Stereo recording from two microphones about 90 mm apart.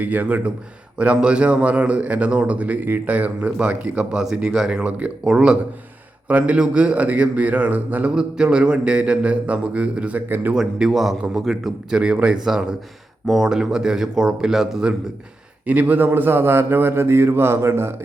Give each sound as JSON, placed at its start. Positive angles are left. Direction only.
{"t": 0.0, "sound": "a man's voice", "side_deg": -20}
{"t": 10.5, "sound": "a man's voice", "side_deg": -5}
{"t": 15.6, "sound": "a man's voice", "side_deg": -15}